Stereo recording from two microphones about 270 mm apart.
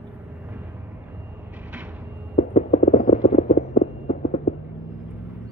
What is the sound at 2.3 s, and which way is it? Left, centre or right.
Clip-clop, left.